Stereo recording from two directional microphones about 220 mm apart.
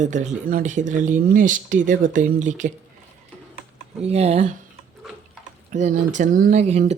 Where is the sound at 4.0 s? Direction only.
30° right (ahead or behind).